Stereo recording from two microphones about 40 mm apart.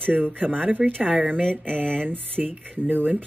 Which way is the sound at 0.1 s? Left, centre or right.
Right.